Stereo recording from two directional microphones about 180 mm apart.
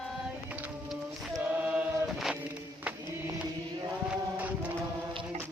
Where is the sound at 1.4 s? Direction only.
10° right (ahead or behind).